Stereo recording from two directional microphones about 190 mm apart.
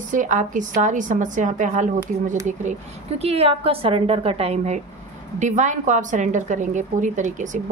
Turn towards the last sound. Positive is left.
turn(degrees=-40)  # may be behind; listen again after turning